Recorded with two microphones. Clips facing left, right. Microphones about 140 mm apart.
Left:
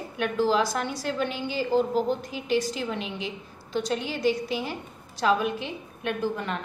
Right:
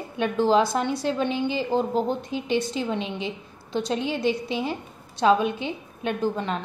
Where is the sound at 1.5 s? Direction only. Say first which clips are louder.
Left 4 dB; 5° left (ahead or behind).